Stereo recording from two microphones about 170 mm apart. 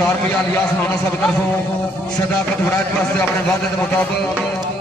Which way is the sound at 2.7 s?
15° left (ahead or behind).